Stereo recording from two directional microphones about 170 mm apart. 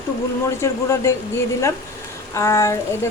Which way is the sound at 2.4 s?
15° left (ahead or behind).